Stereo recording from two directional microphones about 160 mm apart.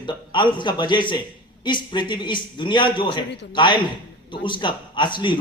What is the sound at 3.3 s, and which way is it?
Speech, 90° left.